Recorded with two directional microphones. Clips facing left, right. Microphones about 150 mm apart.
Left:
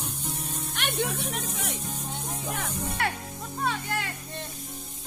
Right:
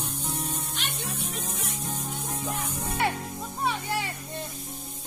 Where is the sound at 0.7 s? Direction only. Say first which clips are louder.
Left 6 dB; 65° left (ahead or behind); by 1.7 s 80° left.